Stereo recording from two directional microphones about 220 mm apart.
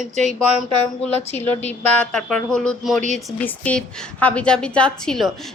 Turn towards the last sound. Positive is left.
turn(degrees=0)  # may be behind; listen again after turning